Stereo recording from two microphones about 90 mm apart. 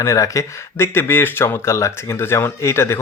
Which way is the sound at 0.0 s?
35° left (ahead or behind).